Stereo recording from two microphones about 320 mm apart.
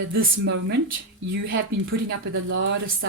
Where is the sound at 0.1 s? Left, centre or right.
Right.